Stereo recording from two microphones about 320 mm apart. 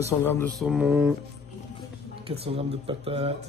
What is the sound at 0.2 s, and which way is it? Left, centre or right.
Mantra, centre.